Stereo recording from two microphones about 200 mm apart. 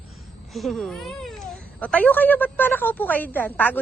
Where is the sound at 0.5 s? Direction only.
Centre (ahead or behind).